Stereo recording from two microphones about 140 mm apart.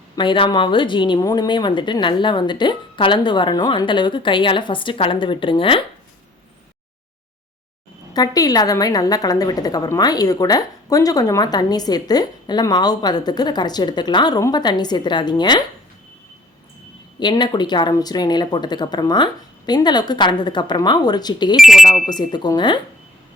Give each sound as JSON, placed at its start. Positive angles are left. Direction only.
{"t": 0.2, "sound": "a woman's voice", "side_deg": 35}
{"t": 8.1, "sound": "a woman's voice", "side_deg": 25}
{"t": 17.2, "sound": "a woman's voice", "side_deg": 30}
{"t": 21.5, "sound": "speech", "side_deg": 0}
{"t": 22.1, "sound": "a woman's voice", "side_deg": 30}